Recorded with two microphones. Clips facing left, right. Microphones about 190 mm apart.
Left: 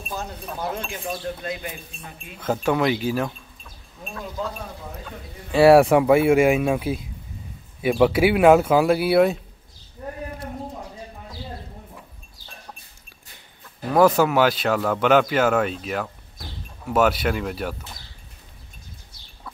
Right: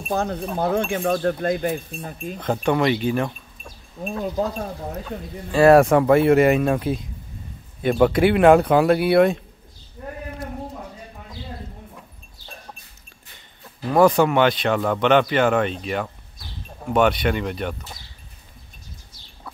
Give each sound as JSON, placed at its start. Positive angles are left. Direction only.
{"t": 0.1, "sound": "speech", "side_deg": -55}
{"t": 2.0, "sound": "speech", "side_deg": -35}
{"t": 2.4, "sound": "speech", "side_deg": 5}
{"t": 5.5, "sound": "speech", "side_deg": 10}
{"t": 13.9, "sound": "speech", "side_deg": 5}